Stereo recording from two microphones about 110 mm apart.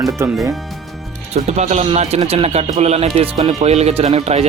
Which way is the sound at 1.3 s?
85° right.